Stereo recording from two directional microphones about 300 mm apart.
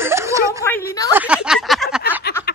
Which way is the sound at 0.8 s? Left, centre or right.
Centre.